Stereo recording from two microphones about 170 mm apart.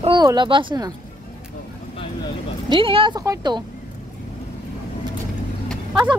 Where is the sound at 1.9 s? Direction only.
30° left (ahead or behind).